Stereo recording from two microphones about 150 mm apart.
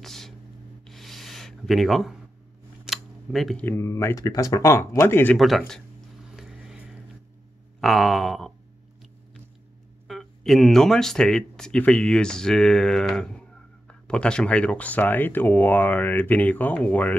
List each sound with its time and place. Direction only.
0.0 s a sound: centre (ahead or behind)
0.8 s rub: centre (ahead or behind)
2.8 s camera: centre (ahead or behind)
3.6 s speech: 15° left (ahead or behind)
6.3 s a sound: 5° right (ahead or behind)
7.8 s speech: centre (ahead or behind)
10.0 s speech: centre (ahead or behind)